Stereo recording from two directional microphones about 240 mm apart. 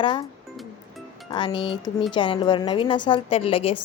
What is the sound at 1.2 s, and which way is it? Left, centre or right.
A woman's voice, centre.